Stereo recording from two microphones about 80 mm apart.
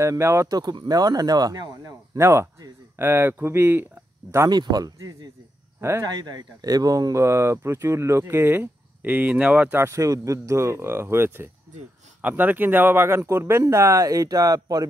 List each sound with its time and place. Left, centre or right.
0.0 s speech: right
0.5 s speech: right
2.1 s speech: right
4.5 s speech: right
5.8 s speech: right
6.0 s speech: right
9.8 s speech: right